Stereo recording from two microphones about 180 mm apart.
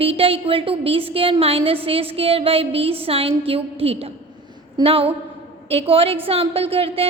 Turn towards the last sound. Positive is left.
turn(degrees=-30)  # may be behind; listen again after turning